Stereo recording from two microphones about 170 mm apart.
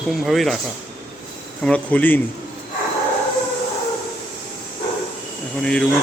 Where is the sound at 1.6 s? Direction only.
10° left (ahead or behind).